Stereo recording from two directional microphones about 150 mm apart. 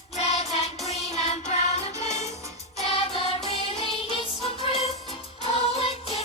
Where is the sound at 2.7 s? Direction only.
40° left (ahead or behind).